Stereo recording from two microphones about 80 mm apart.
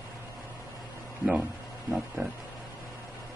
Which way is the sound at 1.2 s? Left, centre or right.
Centre.